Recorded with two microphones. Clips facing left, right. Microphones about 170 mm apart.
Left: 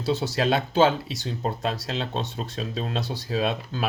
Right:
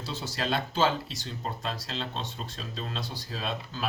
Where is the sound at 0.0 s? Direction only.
65° left (ahead or behind).